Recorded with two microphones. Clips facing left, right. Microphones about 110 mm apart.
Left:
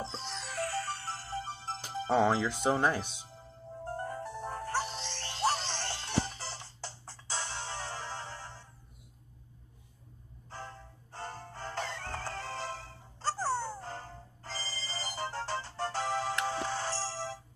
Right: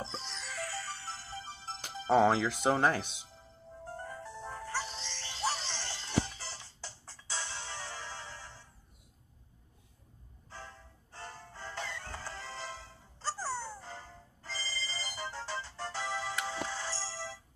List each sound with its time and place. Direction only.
0.0 s music: 45° left (ahead or behind)
2.0 s speech: centre (ahead or behind)
3.8 s music: 50° left (ahead or behind)
10.5 s music: 45° left (ahead or behind)